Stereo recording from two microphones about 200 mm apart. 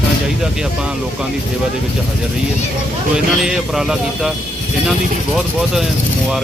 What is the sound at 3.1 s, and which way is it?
Speech, 5° right (ahead or behind).